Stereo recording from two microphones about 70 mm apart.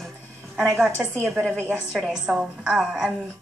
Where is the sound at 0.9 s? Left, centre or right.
Right.